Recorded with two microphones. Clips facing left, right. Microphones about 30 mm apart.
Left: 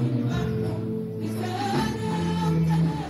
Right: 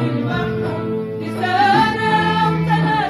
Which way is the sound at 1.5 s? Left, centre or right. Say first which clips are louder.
Right 15 dB; right.